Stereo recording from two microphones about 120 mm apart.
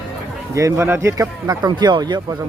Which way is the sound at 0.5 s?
25° right (ahead or behind).